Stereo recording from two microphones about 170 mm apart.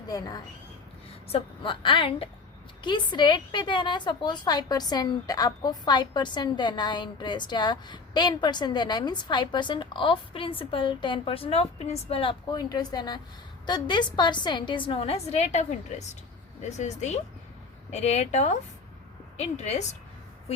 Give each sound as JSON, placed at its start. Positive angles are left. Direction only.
{"t": 0.1, "sound": "a woman's voice", "side_deg": 25}
{"t": 16.6, "sound": "a woman's voice", "side_deg": 40}